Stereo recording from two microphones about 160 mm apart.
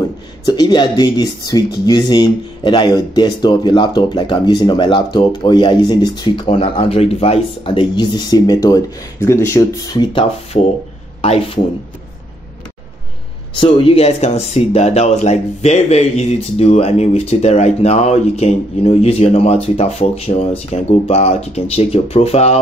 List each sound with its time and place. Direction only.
0.5 s speech: 25° left (ahead or behind)
11.1 s a man's voice: 35° left (ahead or behind)
13.6 s speech: 40° left (ahead or behind)